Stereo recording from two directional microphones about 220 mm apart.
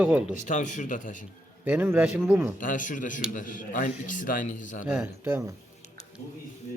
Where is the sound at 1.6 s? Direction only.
10° right (ahead or behind).